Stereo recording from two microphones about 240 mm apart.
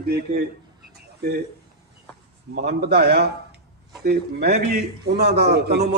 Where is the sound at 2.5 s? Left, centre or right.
Right.